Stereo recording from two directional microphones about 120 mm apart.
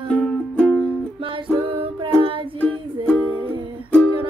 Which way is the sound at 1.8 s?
45° right (ahead or behind).